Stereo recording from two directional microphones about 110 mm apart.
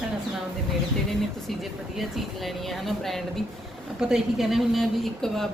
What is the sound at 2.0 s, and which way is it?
Speech, centre (ahead or behind).